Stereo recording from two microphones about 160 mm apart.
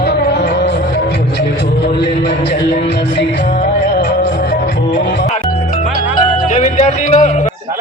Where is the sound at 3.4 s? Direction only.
80° left; by 5.0 s 60° left (ahead or behind).